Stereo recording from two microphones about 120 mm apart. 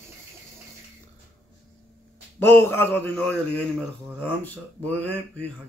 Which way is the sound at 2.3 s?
20° left (ahead or behind).